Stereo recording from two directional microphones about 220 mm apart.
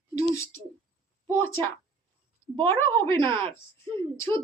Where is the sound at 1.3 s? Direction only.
10° left (ahead or behind).